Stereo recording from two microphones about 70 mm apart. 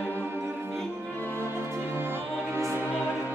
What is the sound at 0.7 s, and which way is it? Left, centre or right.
Music, centre.